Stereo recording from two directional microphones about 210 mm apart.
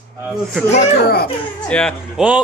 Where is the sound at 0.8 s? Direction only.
50° left (ahead or behind).